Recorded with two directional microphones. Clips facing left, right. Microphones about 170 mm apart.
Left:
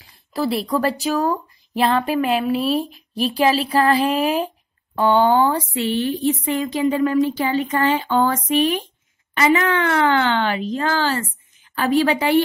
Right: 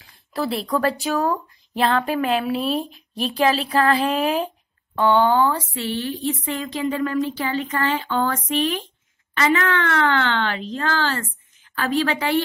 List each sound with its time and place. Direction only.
0.0 s speech: centre (ahead or behind)
4.9 s speech: 15° left (ahead or behind)